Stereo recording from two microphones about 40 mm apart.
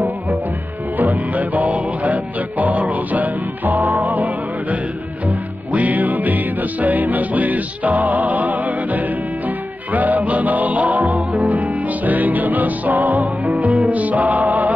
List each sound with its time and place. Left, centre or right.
0.9 s music: right